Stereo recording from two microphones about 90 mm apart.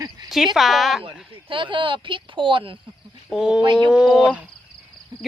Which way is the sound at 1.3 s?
70° right (ahead or behind).